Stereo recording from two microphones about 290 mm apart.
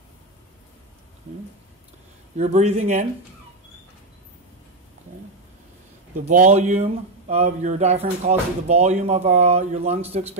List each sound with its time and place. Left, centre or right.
2.3 s speech: right
6.2 s speech: right